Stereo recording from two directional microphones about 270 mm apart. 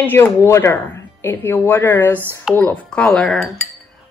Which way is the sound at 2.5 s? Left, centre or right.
Centre.